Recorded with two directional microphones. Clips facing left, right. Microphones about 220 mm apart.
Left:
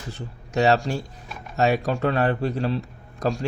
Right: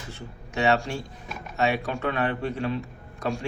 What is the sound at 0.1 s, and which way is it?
A man's voice, 35° left (ahead or behind).